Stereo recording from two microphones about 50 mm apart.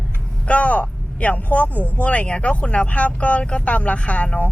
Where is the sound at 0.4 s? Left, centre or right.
Left.